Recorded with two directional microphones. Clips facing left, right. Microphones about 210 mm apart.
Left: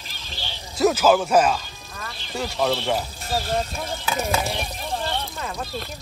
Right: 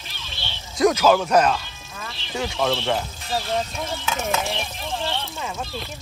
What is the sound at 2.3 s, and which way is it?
Snake, centre (ahead or behind).